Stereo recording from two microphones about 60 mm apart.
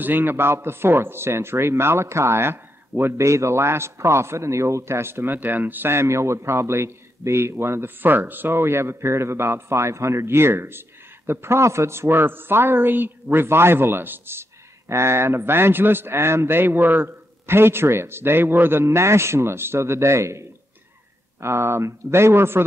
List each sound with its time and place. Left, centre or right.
0.0 s speech: right
14.9 s speech: right